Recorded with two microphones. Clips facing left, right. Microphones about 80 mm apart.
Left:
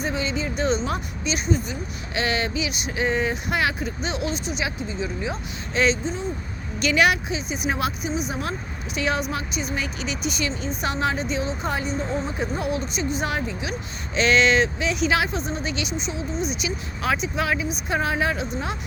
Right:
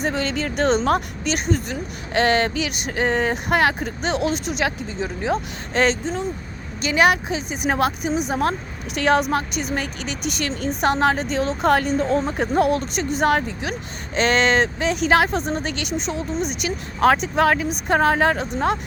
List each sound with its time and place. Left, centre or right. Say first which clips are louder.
0.0 s speech: right 3 dB; right
2.2 s speech: right 5 dB; right
4.3 s speech: right 4 dB; right
4.6 s speech: right 4 dB; right
6.8 s speech: right 2 dB; right